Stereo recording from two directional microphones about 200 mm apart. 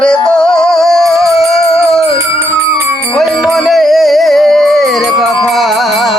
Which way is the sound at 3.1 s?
Centre (ahead or behind).